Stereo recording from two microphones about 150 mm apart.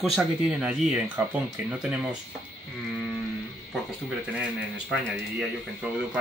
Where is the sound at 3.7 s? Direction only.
Centre (ahead or behind).